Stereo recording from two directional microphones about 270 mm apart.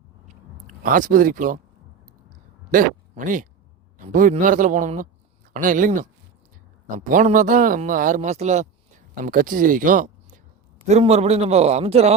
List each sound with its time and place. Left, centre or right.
0.8 s a man's voice: right
2.7 s a man's voice: right